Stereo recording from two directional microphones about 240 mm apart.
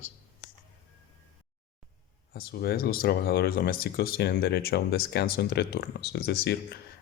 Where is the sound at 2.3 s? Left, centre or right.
Left.